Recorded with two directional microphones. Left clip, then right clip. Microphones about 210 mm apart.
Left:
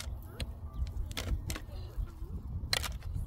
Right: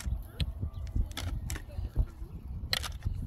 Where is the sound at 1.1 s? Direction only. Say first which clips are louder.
Left 1 dB; 40° left (ahead or behind).